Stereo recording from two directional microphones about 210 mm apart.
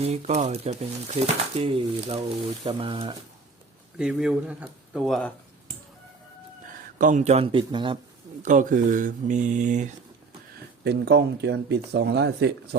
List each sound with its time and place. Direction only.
0.0 s speech: 30° right (ahead or behind)
3.9 s speech: 5° right (ahead or behind)
7.0 s speech: 35° right (ahead or behind)
8.4 s speech: 35° right (ahead or behind)
10.8 s speech: 50° right (ahead or behind)